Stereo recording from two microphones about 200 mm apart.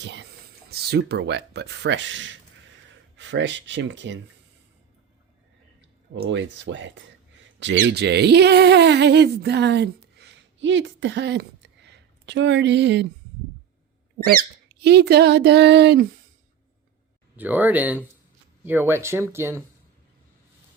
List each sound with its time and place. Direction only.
0.0 s speech: 60° right (ahead or behind)
6.1 s speech: 65° right (ahead or behind)
14.2 s speech: 50° right (ahead or behind)
17.3 s speech: 10° right (ahead or behind)